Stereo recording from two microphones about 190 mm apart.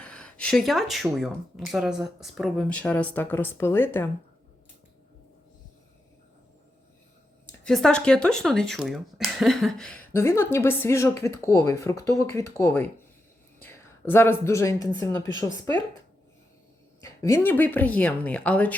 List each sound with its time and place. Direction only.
0.0 s a sound: 5° left (ahead or behind)
1.2 s speech: centre (ahead or behind)
7.6 s a woman's voice: 5° left (ahead or behind)
15.2 s speech: 75° left (ahead or behind)
17.0 s speech: 15° left (ahead or behind)